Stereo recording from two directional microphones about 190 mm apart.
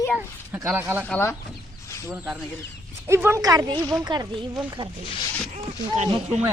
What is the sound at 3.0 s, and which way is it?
Speech, 15° right (ahead or behind).